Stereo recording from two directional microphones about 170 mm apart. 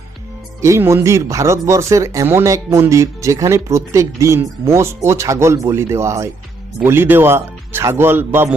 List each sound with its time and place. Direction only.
0.6 s speech: 15° right (ahead or behind)